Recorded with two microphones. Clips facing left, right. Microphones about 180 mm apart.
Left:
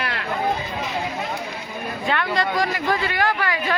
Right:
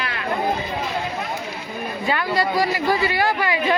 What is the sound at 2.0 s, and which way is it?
A man's voice, 5° right (ahead or behind).